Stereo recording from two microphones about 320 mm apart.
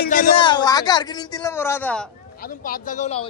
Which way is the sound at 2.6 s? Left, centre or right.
Left.